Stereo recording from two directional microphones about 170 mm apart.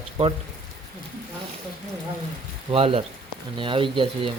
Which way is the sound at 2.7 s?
35° right (ahead or behind).